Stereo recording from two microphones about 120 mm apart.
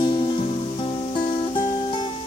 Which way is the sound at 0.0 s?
45° left (ahead or behind).